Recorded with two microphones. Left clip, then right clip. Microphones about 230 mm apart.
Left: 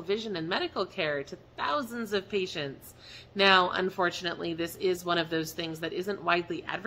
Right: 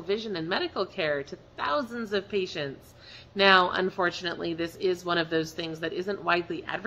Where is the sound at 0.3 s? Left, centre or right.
Centre.